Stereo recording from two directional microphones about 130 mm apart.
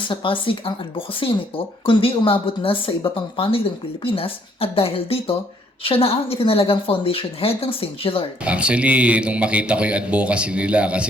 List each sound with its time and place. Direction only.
0.1 s speech: 40° left (ahead or behind)
8.4 s speech: 10° right (ahead or behind)